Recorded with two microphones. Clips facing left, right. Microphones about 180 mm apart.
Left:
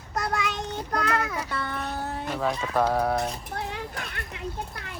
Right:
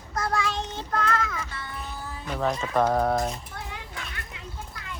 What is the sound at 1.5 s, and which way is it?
Music, 65° left (ahead or behind).